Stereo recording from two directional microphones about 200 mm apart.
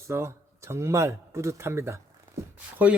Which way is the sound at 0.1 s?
15° right (ahead or behind).